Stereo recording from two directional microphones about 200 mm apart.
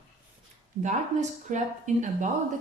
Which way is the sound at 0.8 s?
35° right (ahead or behind).